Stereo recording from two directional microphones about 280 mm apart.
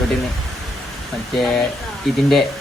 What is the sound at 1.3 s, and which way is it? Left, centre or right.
Speech, centre.